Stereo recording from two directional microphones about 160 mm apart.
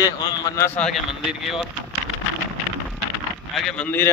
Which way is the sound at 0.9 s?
5° right (ahead or behind).